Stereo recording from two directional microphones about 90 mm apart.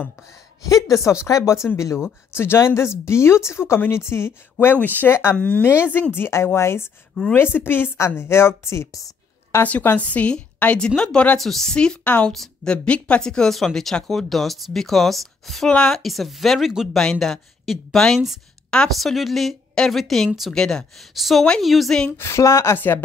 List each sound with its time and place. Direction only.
0.7 s a woman's voice: 35° left (ahead or behind)
5.4 s a woman's voice: 15° left (ahead or behind); by 9.6 s 35° left (ahead or behind)
9.6 s a woman's voice: 20° left (ahead or behind)
22.1 s a woman's voice: 30° left (ahead or behind)